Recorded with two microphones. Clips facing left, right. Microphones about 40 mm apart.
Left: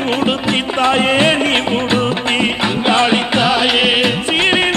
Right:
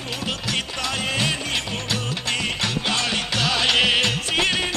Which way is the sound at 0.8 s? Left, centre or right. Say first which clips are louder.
Left 14 dB; left.